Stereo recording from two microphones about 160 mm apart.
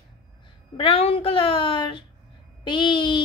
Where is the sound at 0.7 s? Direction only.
35° left (ahead or behind).